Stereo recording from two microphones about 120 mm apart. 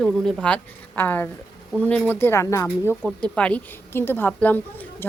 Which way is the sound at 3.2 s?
10° left (ahead or behind).